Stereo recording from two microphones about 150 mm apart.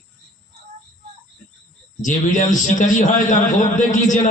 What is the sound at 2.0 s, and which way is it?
A man's voice, 55° left (ahead or behind).